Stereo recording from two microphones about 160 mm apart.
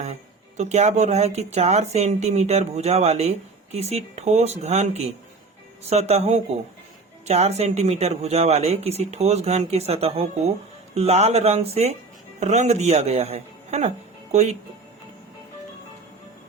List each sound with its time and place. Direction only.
0.0 s speech: 45° right (ahead or behind)